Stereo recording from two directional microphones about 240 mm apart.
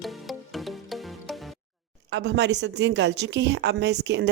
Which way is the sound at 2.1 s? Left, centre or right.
Right.